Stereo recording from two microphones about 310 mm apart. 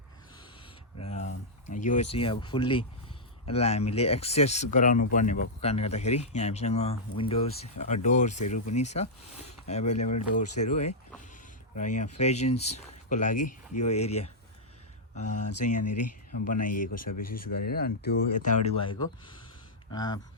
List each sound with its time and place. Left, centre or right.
1.0 s a sound: left
1.7 s speech: left
15.2 s speech: left
15.6 s speech: left
16.9 s speech: left
17.7 s speech: left
18.6 s speech: centre